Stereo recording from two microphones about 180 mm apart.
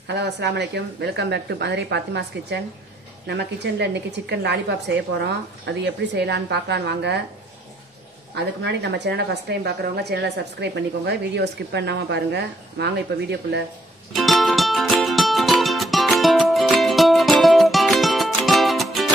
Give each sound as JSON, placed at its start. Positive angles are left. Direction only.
{"t": 0.0, "sound": "a woman's voice", "side_deg": -70}
{"t": 8.6, "sound": "a woman's voice", "side_deg": -70}
{"t": 14.1, "sound": "music", "side_deg": 0}